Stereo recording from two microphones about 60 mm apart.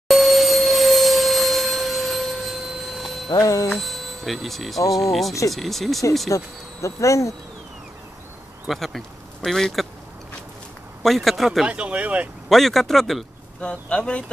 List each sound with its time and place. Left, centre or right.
0.1 s tuning fork: centre
3.3 s speech: left
3.7 s speech: centre
6.3 s speech: left
8.6 s speech: centre
11.0 s speech: centre
11.6 s speech: centre
12.4 s speech: centre
13.6 s speech: centre